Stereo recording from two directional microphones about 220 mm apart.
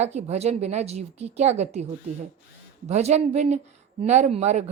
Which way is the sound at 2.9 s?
30° right (ahead or behind).